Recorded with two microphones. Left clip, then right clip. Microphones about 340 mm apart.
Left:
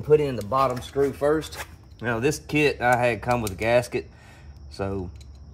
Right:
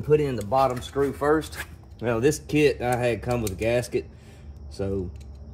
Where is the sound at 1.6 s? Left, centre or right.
Left.